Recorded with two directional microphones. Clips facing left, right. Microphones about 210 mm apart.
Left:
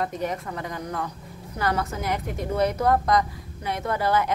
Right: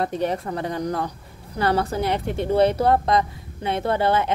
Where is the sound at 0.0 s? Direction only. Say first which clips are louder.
Right 4 dB; 30° right (ahead or behind).